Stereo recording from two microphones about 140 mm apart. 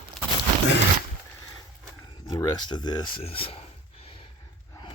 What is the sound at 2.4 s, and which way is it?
Speech, 30° left (ahead or behind).